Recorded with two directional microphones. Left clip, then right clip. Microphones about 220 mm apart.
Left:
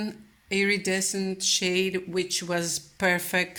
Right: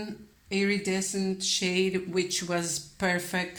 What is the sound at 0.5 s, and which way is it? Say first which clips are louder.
Speech: left 3 dB; 35° left (ahead or behind).